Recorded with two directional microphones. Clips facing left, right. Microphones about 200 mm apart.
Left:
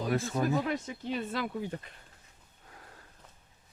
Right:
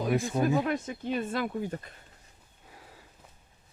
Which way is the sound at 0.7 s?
50° right (ahead or behind).